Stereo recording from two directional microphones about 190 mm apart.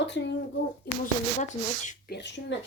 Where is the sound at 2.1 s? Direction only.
65° left (ahead or behind).